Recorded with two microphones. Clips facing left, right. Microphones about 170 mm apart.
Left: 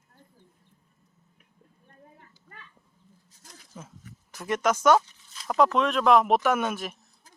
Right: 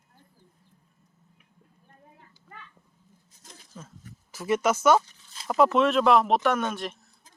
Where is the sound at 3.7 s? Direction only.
10° left (ahead or behind).